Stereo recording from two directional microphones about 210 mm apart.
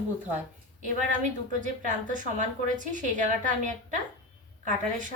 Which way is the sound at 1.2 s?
35° right (ahead or behind).